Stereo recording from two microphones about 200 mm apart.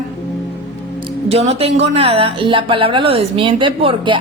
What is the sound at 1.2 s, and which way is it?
A woman's voice, 30° right (ahead or behind).